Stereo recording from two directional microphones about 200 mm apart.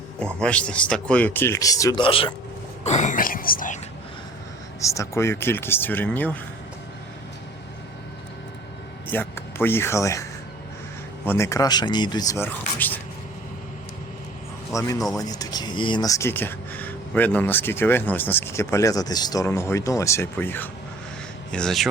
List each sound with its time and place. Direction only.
0.3 s speech: 5° left (ahead or behind); by 3.8 s 45° left (ahead or behind)
4.8 s speech: 15° left (ahead or behind)
9.0 s speech: 10° left (ahead or behind)
11.3 s speech: 15° left (ahead or behind)
14.8 s speech: 15° left (ahead or behind)